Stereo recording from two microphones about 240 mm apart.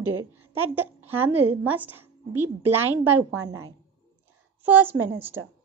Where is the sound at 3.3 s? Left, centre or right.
Right.